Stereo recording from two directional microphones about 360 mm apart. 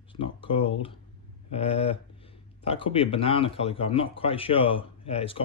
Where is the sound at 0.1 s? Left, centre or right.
Centre.